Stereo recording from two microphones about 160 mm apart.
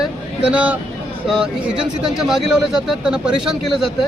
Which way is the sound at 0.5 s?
10° right (ahead or behind).